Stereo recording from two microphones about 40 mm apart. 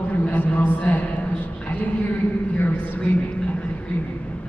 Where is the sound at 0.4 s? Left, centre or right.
Left.